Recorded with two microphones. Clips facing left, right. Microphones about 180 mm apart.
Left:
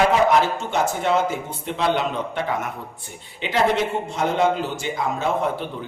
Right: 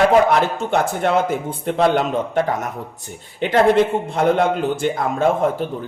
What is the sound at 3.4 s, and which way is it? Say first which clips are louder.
A man's voice: right 6 dB; 55° right (ahead or behind).